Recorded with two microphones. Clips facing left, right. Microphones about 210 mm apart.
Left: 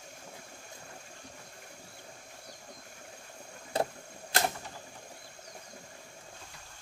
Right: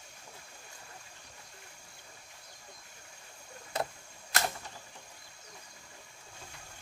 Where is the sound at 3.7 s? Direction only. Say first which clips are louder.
Left 4 dB; 30° left (ahead or behind).